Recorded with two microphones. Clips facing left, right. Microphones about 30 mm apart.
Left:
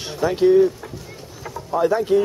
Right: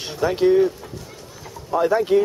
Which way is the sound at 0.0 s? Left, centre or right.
Centre.